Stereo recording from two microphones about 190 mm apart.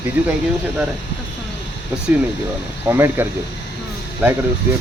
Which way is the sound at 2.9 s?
10° right (ahead or behind).